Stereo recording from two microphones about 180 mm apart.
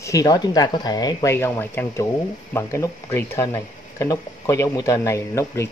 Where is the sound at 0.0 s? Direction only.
20° left (ahead or behind).